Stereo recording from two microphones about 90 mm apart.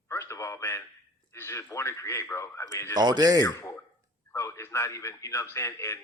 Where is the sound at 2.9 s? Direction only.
50° right (ahead or behind).